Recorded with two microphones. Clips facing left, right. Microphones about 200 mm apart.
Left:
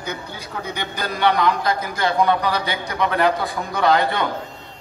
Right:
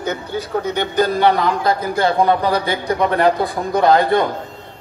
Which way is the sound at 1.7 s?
30° right (ahead or behind).